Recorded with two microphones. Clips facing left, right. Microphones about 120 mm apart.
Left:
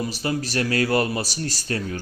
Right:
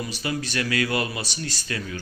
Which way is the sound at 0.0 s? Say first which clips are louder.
Left 3 dB; 35° left (ahead or behind).